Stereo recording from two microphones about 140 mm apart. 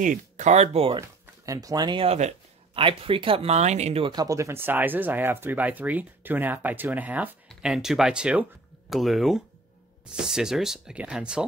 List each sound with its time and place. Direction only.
0.0 s speech: 65° right (ahead or behind); by 1.0 s 40° right (ahead or behind)
1.0 s speech: 25° right (ahead or behind)
2.0 s speech: 55° right (ahead or behind)
2.7 s speech: 40° right (ahead or behind)
4.0 s speech: 30° right (ahead or behind); by 11.4 s 5° right (ahead or behind)